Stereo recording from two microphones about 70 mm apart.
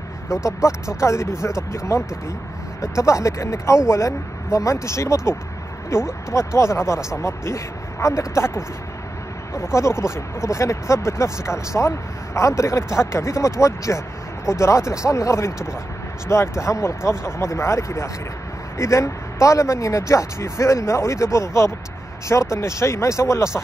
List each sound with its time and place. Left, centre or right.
0.4 s speech: centre
1.0 s speech: left
9.8 s speech: left